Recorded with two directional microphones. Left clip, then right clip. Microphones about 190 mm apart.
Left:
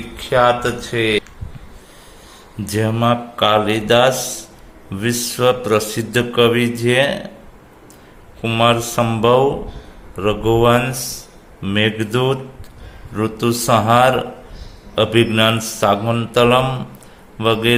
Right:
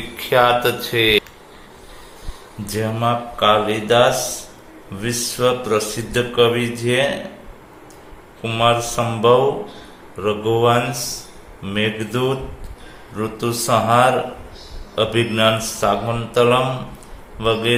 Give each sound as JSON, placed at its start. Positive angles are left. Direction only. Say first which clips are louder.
{"t": 0.2, "sound": "speech", "louder": "even", "side_deg": 30}
{"t": 2.6, "sound": "speech", "louder": "left 3 dB", "side_deg": 50}
{"t": 8.4, "sound": "speech", "louder": "left 2 dB", "side_deg": 45}